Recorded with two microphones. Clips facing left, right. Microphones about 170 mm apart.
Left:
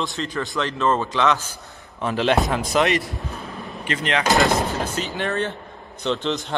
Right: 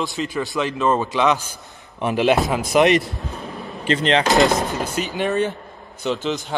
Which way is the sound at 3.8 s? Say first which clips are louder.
Right 6 dB; 30° right (ahead or behind).